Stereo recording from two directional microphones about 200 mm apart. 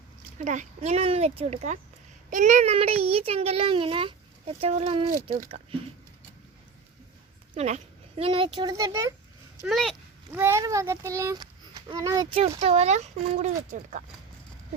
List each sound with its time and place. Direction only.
0.3 s a child's voice: 35° right (ahead or behind)
7.5 s speech: 35° right (ahead or behind)
8.2 s a child's voice: 25° right (ahead or behind)
9.6 s speech: centre (ahead or behind)
10.3 s a child's voice: 10° right (ahead or behind); by 14.0 s 35° right (ahead or behind)